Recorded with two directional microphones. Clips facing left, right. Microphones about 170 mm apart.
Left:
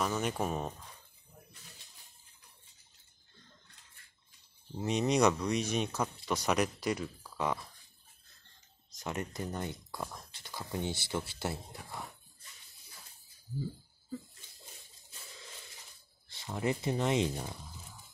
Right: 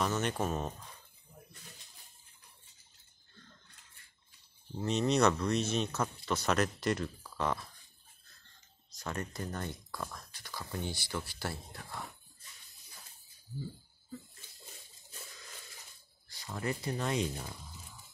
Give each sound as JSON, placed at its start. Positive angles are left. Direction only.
{"t": 0.0, "sound": "speech", "side_deg": 5}
{"t": 4.8, "sound": "speech", "side_deg": 10}
{"t": 8.9, "sound": "speech", "side_deg": 20}
{"t": 16.3, "sound": "speech", "side_deg": 25}